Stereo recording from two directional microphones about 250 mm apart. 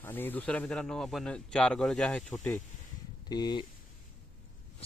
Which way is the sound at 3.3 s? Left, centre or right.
Centre.